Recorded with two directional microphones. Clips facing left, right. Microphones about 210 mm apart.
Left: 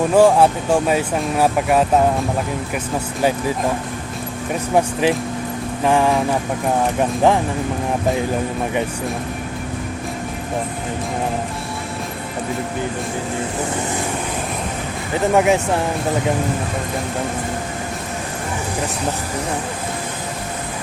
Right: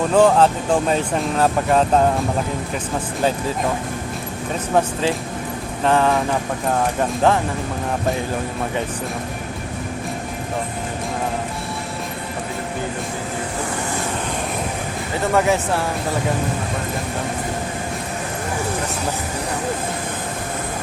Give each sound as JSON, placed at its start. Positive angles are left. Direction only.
{"t": 0.1, "sound": "speech", "side_deg": 10}
{"t": 4.7, "sound": "speech", "side_deg": 10}
{"t": 15.3, "sound": "speech", "side_deg": 15}